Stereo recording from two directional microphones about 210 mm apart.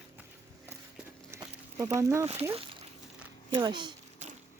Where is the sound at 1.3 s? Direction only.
15° right (ahead or behind).